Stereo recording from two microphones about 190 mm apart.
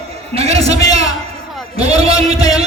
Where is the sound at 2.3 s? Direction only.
20° left (ahead or behind).